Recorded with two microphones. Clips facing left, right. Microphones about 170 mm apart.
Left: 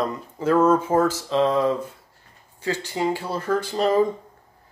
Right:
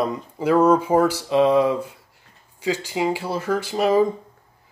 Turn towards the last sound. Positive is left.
turn(degrees=-5)  # may be behind; listen again after turning